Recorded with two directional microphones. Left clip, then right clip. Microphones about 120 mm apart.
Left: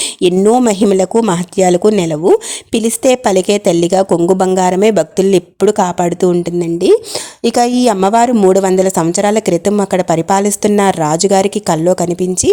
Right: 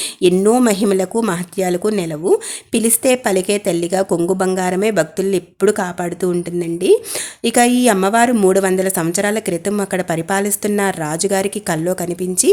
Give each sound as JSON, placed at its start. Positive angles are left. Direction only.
{"t": 0.2, "sound": "a woman's voice", "side_deg": 55}